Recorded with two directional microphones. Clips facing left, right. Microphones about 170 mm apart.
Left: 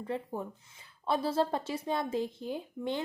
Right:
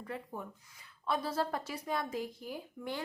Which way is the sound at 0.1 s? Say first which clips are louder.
Left 6 dB; 25° left (ahead or behind).